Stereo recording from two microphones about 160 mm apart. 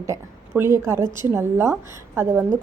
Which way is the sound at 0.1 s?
15° right (ahead or behind).